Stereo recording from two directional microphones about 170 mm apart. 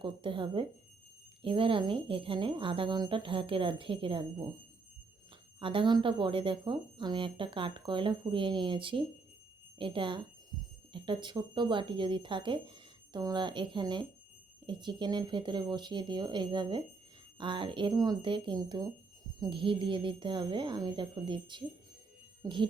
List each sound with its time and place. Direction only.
0.0 s speech: 30° right (ahead or behind)
5.5 s speech: 30° right (ahead or behind)